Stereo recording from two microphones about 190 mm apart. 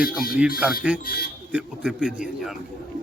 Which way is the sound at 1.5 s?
5° right (ahead or behind).